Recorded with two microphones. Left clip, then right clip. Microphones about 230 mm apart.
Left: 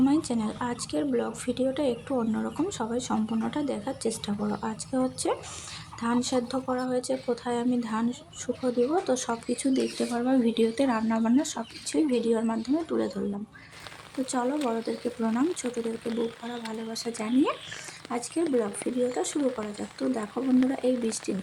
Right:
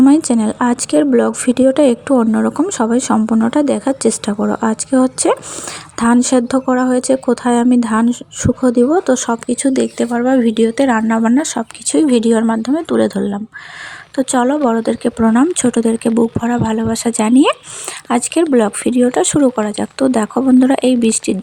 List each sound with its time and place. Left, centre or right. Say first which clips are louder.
0.0 s speech: right 14 dB; right
14.3 s speech: right 14 dB; right